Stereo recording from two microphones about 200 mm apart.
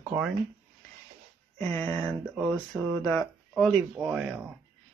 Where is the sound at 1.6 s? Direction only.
10° left (ahead or behind).